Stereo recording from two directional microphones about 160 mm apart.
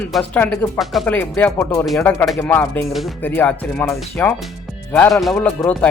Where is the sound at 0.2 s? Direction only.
10° left (ahead or behind).